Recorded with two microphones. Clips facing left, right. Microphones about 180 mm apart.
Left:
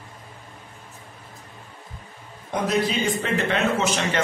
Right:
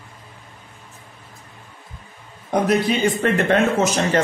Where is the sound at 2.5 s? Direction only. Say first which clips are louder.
Right 5 dB; 60° right (ahead or behind); by 4.2 s 40° right (ahead or behind).